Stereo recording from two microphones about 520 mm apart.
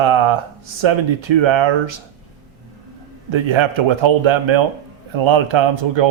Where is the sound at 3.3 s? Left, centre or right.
Right.